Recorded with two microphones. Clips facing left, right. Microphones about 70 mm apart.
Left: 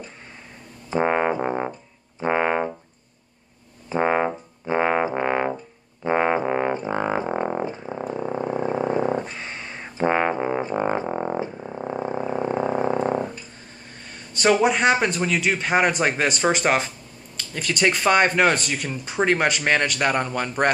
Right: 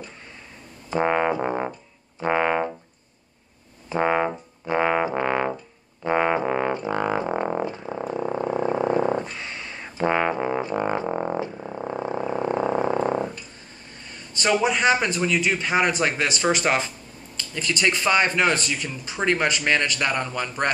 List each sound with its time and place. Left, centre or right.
0.8 s music: centre
1.4 s music: centre
1.7 s music: left
3.9 s music: centre
7.2 s music: centre
8.1 s a sound: centre
9.2 s a sound: left
9.8 s music: left
11.1 s music: centre
11.5 s frog: centre
14.4 s speech: left
17.7 s speech: left
18.0 s speech: left